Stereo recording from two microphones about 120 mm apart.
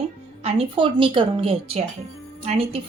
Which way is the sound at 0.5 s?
45° right (ahead or behind).